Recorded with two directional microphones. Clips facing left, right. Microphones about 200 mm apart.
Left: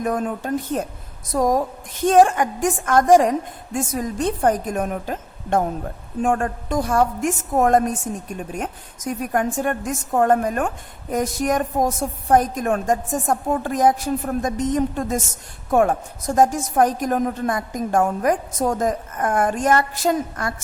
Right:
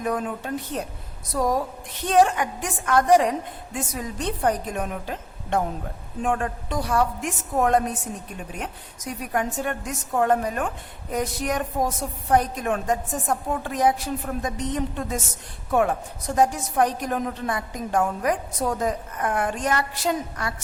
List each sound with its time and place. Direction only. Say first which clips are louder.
0.0 s a woman's voice: left 4 dB; 45° left (ahead or behind)